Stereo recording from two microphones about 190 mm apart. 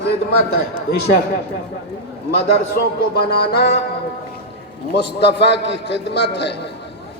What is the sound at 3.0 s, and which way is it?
Speech, 55° left (ahead or behind).